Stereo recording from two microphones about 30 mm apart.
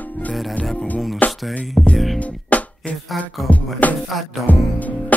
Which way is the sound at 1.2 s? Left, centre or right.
Left.